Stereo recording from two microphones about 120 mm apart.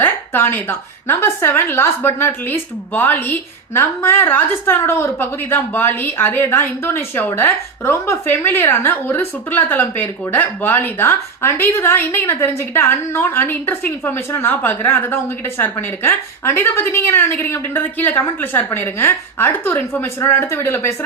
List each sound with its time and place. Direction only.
0.0 s a woman's voice: 15° left (ahead or behind)